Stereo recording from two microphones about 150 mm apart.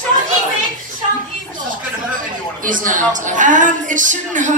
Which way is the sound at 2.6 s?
60° right (ahead or behind).